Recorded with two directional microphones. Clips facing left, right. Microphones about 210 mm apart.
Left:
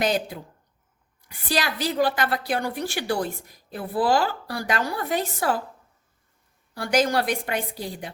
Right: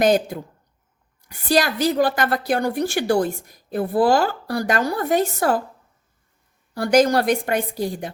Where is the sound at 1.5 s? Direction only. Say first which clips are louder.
Right 7 dB; 45° right (ahead or behind).